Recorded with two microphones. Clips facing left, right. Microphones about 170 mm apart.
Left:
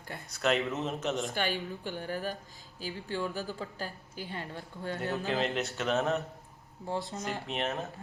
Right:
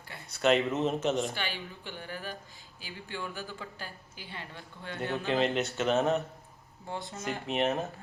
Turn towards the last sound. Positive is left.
turn(degrees=0)  # may be behind; listen again after turning